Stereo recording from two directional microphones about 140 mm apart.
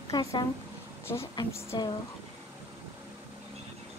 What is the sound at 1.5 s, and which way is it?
Speech, 20° left (ahead or behind).